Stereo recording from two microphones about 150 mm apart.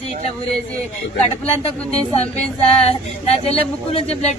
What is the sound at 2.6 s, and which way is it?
Speech, 40° left (ahead or behind).